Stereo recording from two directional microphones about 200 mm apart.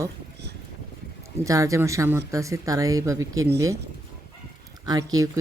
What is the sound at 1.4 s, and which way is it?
Speech, 15° right (ahead or behind).